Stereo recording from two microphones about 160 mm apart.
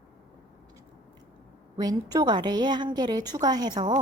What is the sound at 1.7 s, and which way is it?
A woman's voice, 25° right (ahead or behind).